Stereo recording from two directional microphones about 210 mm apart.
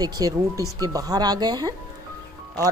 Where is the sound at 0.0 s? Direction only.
20° right (ahead or behind).